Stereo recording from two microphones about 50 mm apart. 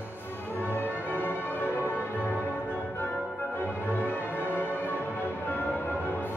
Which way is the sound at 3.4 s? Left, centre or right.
Left.